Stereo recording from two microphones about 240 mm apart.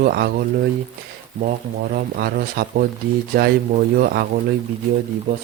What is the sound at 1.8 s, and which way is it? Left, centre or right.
Speech, right.